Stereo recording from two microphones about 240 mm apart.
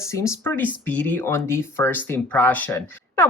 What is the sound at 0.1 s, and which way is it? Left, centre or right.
Speech, centre.